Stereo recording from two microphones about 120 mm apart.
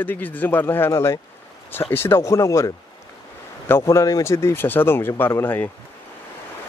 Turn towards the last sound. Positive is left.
turn(degrees=15)  # may be behind; listen again after turning